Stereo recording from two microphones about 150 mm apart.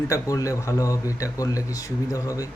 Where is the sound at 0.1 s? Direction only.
20° left (ahead or behind).